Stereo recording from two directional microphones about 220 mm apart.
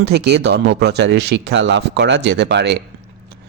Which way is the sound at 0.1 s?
50° right (ahead or behind).